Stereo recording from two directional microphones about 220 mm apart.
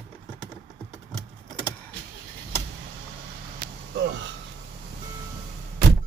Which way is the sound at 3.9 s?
50° right (ahead or behind).